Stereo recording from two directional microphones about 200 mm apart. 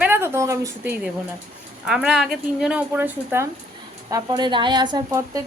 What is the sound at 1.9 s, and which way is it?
Speech, 5° right (ahead or behind).